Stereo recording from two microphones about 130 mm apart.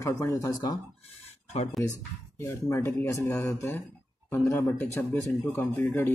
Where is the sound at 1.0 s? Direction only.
50° left (ahead or behind).